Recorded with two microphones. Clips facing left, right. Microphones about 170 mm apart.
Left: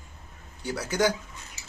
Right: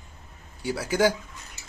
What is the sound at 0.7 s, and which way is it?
Speech, 5° right (ahead or behind).